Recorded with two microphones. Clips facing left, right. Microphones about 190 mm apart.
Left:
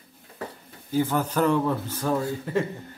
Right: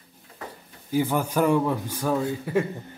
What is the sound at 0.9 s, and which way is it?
A man's voice, 15° right (ahead or behind).